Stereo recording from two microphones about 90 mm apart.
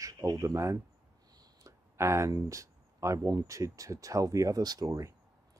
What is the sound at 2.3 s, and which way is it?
Speech, 35° right (ahead or behind).